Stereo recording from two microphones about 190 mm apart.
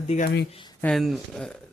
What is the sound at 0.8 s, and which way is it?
Speech, centre (ahead or behind).